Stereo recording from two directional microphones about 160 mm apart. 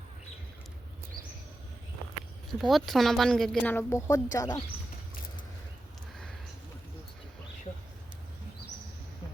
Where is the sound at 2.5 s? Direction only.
Centre (ahead or behind); by 4.6 s 25° left (ahead or behind).